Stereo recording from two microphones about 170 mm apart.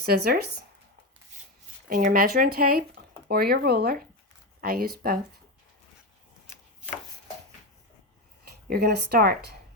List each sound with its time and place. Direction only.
0.0 s speech: 65° right (ahead or behind)
1.9 s speech: 55° right (ahead or behind)
8.7 s speech: 70° right (ahead or behind)